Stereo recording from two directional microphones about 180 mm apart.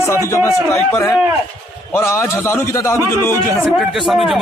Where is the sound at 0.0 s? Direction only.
15° left (ahead or behind).